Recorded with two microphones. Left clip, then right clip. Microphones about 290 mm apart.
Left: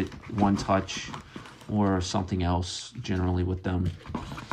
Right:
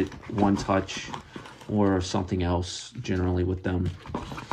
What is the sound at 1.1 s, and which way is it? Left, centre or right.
Horse, centre.